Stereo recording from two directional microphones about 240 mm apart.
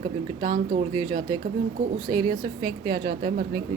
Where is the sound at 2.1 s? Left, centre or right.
Centre.